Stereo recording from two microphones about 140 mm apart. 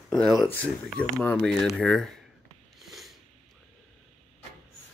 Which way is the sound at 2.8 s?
Centre (ahead or behind).